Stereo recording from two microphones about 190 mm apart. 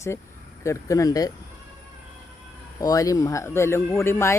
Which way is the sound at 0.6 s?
15° left (ahead or behind).